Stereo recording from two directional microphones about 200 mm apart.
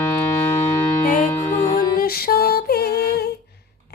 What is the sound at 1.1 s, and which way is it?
Music, 45° left (ahead or behind).